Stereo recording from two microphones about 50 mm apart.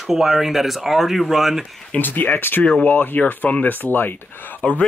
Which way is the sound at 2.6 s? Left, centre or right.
Left.